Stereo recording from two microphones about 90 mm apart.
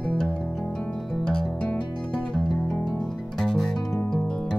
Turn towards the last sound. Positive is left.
turn(degrees=5)  # may be behind; listen again after turning